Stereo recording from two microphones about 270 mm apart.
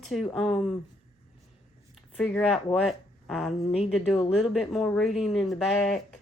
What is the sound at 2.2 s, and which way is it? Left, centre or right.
A woman's voice, centre.